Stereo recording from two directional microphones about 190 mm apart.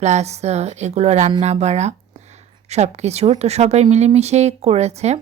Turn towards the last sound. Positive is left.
turn(degrees=-35)  # may be behind; listen again after turning